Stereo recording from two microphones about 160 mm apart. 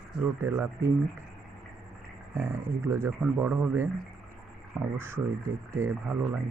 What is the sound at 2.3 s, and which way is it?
Speech, 15° right (ahead or behind).